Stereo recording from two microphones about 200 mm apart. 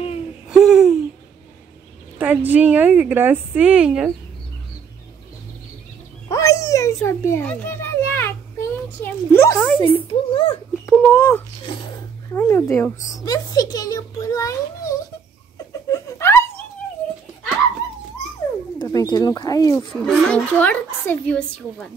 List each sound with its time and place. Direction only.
0.5 s a sound: centre (ahead or behind)
2.1 s a woman's voice: 10° right (ahead or behind)
6.2 s a sound: 15° left (ahead or behind)
9.8 s a child's voice: 25° left (ahead or behind)
10.9 s a child's voice: 10° left (ahead or behind)
15.5 s laughter: 15° left (ahead or behind)
18.8 s speech: 20° left (ahead or behind)
19.9 s a woman's voice: 5° left (ahead or behind)